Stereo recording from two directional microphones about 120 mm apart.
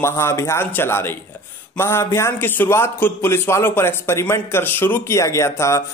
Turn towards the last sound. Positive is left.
turn(degrees=25)  # may be behind; listen again after turning